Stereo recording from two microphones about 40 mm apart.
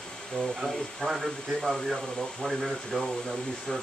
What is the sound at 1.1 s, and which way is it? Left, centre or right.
Speech, centre.